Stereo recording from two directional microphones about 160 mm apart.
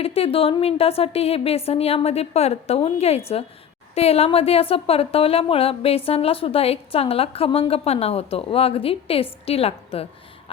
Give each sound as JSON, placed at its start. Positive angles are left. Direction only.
{"t": 0.0, "sound": "a woman's voice", "side_deg": 40}